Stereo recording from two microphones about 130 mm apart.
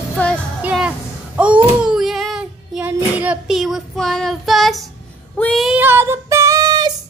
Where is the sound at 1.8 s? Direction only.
Centre (ahead or behind).